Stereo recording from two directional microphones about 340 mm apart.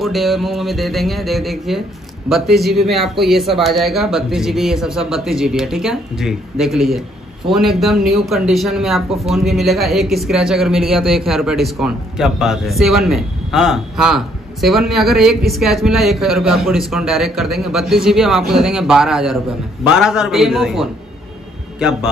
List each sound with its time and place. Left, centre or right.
0.0 s speech: centre